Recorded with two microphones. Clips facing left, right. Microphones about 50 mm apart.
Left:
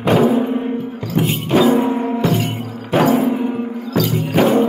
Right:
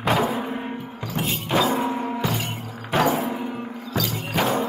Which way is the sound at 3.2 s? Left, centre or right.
Centre.